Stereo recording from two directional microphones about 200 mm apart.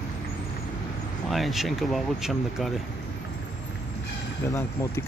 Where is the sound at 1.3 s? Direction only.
Centre (ahead or behind).